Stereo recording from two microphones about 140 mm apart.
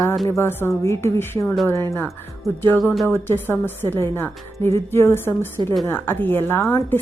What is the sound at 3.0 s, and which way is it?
Speech, 15° left (ahead or behind).